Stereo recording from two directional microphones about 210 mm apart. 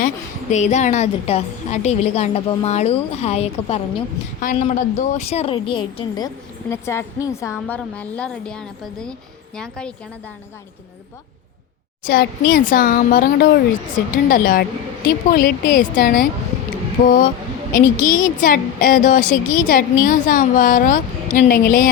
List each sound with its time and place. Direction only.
0.5 s a woman's voice: 35° left (ahead or behind); by 9.9 s 5° left (ahead or behind)
12.0 s speech: 45° left (ahead or behind)